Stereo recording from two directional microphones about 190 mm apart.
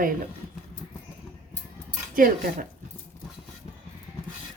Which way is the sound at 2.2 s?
45° right (ahead or behind).